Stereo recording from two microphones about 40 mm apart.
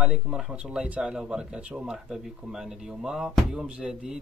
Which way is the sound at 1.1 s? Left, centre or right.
Right.